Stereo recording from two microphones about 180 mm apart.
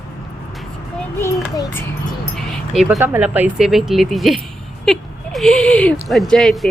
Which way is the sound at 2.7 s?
Centre (ahead or behind).